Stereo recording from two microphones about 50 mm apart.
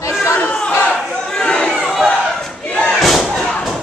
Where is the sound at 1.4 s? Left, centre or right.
Centre.